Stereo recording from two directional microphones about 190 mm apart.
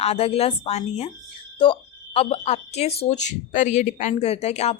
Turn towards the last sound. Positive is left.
turn(degrees=35)  # may be behind; listen again after turning